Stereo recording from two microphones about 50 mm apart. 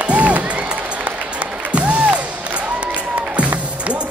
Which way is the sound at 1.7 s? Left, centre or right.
Right.